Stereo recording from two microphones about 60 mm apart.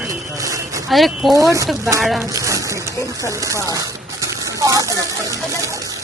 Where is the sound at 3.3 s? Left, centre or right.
Right.